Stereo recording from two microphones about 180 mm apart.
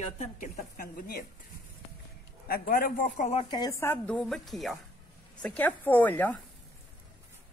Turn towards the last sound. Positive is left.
turn(degrees=10)  # may be behind; listen again after turning